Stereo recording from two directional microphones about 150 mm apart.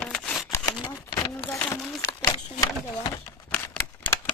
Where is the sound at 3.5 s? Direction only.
10° left (ahead or behind).